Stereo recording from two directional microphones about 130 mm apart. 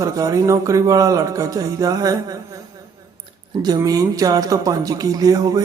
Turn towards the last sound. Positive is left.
turn(degrees=-30)  # may be behind; listen again after turning